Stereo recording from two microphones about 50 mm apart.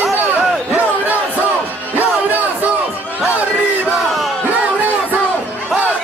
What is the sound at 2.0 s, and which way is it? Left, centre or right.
Music, right.